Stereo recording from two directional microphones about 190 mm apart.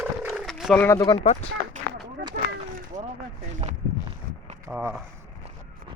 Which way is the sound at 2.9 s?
40° right (ahead or behind).